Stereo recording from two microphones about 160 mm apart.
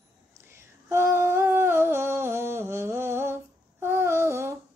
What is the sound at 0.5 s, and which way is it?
Humming, 15° right (ahead or behind).